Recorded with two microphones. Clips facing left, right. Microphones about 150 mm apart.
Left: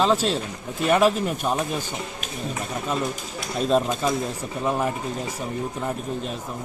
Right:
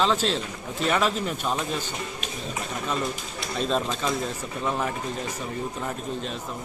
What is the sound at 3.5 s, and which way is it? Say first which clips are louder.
Speech: left 5 dB; 10° left (ahead or behind).